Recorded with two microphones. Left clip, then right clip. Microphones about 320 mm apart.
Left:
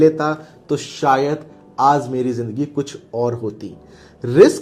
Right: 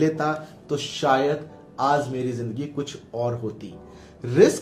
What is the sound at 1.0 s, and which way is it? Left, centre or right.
Speech, left.